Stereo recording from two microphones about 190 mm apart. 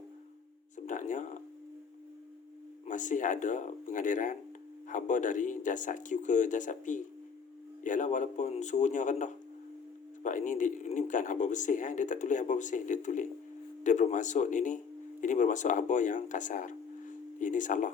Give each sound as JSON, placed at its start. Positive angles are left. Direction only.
{"t": 0.9, "sound": "speech", "side_deg": 40}
{"t": 2.8, "sound": "speech", "side_deg": 40}